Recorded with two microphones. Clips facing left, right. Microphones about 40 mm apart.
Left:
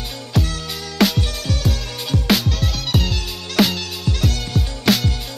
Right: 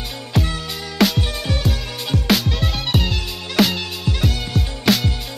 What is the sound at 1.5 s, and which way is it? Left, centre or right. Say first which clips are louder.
Music: right 1 dB; centre.